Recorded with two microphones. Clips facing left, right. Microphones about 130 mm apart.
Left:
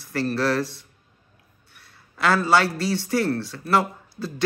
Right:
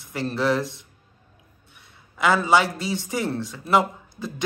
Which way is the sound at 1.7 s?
15° right (ahead or behind).